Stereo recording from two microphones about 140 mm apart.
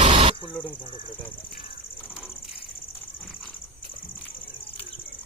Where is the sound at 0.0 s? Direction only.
40° right (ahead or behind).